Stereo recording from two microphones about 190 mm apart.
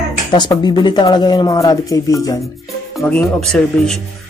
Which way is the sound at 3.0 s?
5° left (ahead or behind).